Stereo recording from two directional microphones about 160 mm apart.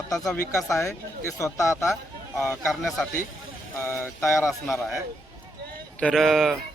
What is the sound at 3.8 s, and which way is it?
Speech, 15° left (ahead or behind).